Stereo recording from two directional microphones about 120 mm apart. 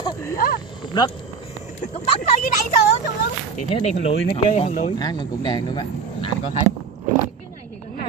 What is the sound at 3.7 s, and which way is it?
Speech, 55° left (ahead or behind).